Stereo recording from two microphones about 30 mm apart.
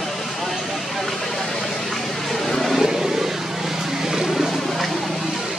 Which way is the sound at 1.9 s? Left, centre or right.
Centre.